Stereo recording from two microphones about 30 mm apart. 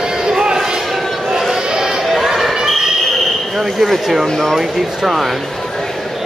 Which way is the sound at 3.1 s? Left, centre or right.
Centre.